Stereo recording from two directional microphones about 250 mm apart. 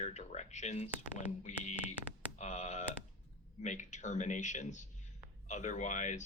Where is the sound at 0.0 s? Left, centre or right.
Left.